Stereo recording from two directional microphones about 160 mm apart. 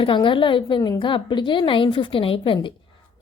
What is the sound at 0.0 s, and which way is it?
A woman's voice, 30° left (ahead or behind).